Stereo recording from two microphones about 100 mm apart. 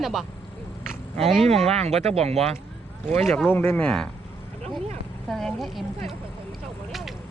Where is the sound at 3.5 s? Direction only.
20° left (ahead or behind).